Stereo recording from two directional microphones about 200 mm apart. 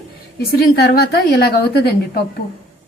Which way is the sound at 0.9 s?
50° left (ahead or behind).